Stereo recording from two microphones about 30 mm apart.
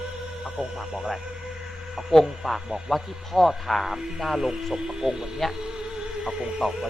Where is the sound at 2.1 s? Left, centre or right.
Centre.